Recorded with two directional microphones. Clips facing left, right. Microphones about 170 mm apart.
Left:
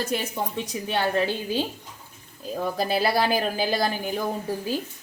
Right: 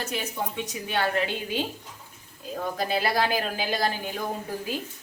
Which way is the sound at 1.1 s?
35° left (ahead or behind).